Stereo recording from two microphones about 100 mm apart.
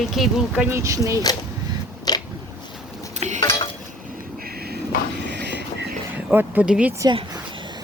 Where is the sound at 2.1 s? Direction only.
40° left (ahead or behind).